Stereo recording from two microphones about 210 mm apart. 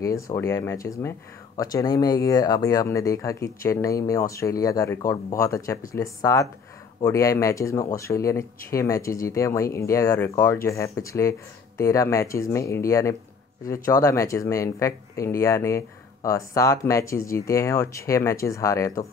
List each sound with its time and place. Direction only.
0.0 s speech: 15° left (ahead or behind)